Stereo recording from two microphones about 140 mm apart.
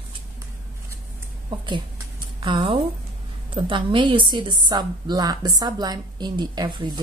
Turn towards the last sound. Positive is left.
turn(degrees=-35)  # may be behind; listen again after turning